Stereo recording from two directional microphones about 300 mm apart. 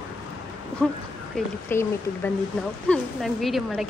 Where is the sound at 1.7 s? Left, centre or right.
Centre.